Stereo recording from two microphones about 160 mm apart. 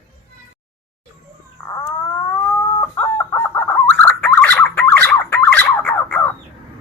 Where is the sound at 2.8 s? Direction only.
15° left (ahead or behind).